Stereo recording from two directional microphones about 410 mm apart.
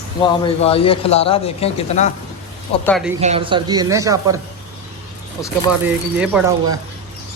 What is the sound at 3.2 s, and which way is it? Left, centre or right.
A man's voice, centre.